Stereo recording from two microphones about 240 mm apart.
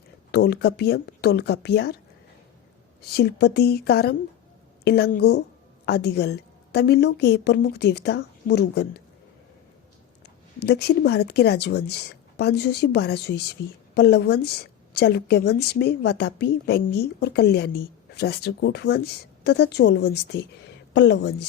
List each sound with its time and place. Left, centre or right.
0.3 s speech: left
3.0 s a woman's voice: left
10.6 s speech: left